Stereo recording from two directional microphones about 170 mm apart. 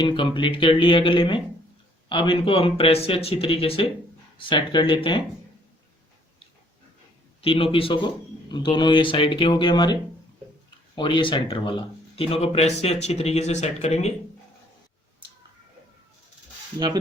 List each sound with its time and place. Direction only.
0.0 s a man's voice: 25° left (ahead or behind)
7.4 s a man's voice: 30° left (ahead or behind)